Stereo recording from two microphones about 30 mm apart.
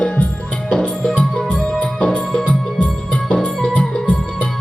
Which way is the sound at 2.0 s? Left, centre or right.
Left.